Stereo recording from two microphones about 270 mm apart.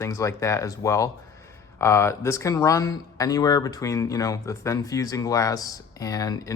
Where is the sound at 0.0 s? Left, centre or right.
Centre.